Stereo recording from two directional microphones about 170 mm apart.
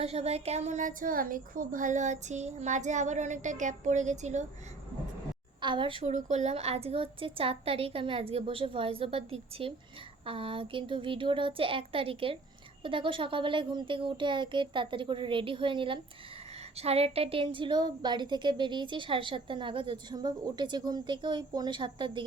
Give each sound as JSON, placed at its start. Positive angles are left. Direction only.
{"t": 0.0, "sound": "a woman's voice", "side_deg": -40}
{"t": 5.5, "sound": "a woman's voice", "side_deg": -30}
{"t": 6.1, "sound": "a woman's voice", "side_deg": -45}